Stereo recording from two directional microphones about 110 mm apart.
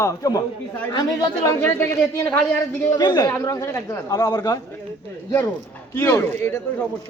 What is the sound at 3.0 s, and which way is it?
Speech, 40° left (ahead or behind).